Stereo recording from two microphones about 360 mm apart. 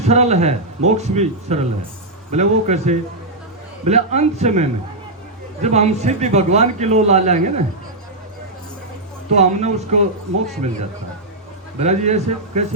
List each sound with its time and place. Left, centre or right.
0.0 s a man's voice: centre
9.3 s a man's voice: centre
11.8 s a man's voice: centre